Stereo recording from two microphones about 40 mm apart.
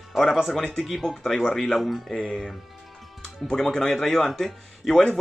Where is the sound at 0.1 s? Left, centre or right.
Centre.